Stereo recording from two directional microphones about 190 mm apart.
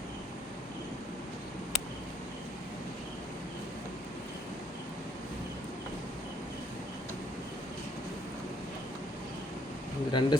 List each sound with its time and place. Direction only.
10.1 s speech: 25° left (ahead or behind)